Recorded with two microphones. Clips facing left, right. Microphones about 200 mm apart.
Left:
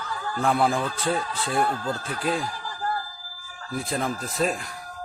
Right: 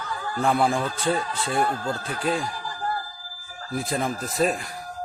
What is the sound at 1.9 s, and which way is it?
Speech, 35° right (ahead or behind).